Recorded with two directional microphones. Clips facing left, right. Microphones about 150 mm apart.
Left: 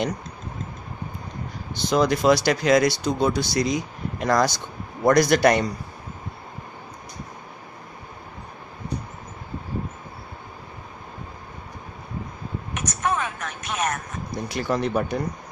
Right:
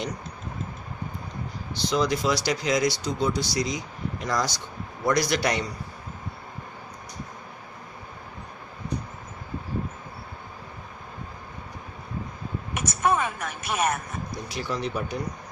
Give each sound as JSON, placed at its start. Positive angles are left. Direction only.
{"t": 1.8, "sound": "a man's voice", "side_deg": 50}
{"t": 12.7, "sound": "a sound", "side_deg": -10}
{"t": 14.5, "sound": "speech", "side_deg": 55}